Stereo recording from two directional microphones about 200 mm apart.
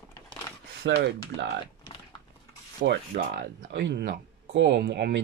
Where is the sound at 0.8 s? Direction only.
55° right (ahead or behind).